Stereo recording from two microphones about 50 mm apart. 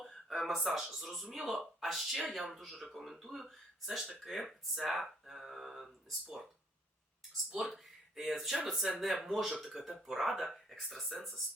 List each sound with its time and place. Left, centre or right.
0.3 s speech: centre
7.5 s speech: centre